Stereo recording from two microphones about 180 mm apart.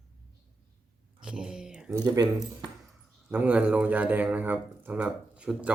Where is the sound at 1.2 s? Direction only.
5° right (ahead or behind).